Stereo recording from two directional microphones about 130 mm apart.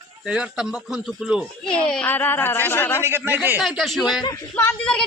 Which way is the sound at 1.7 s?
10° left (ahead or behind).